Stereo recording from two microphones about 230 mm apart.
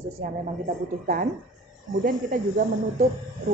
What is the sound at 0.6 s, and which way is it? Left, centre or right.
A woman's voice, right.